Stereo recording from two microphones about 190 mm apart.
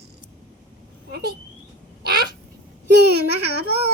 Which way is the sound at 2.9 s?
60° right (ahead or behind).